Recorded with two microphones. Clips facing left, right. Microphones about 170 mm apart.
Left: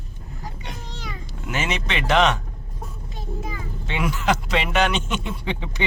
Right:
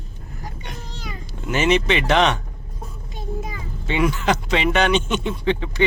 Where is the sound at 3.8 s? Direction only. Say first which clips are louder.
Right 3 dB; centre (ahead or behind).